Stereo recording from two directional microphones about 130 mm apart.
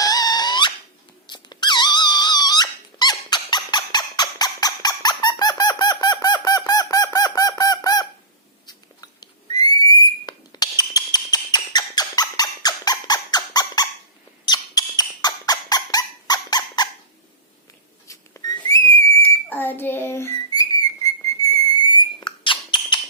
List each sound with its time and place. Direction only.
0.0 s squeak: 30° left (ahead or behind)
8.6 s whistle: 30° left (ahead or behind)
14.4 s dog: 30° left (ahead or behind)
18.1 s a sound: 30° left (ahead or behind)
18.9 s whistle: 25° left (ahead or behind); by 23.0 s 40° left (ahead or behind)